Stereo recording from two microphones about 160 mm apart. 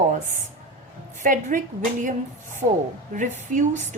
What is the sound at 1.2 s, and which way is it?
Speech, 55° right (ahead or behind).